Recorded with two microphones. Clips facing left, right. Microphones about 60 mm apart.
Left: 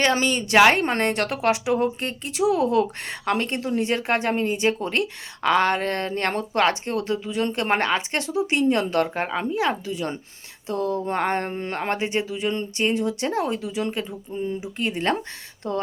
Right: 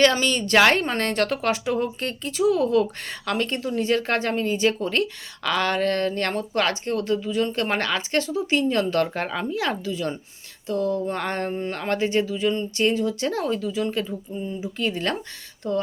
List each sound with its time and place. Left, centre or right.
0.0 s a woman's voice: left
14.3 s speech: left
14.6 s a woman's voice: left
15.6 s speech: left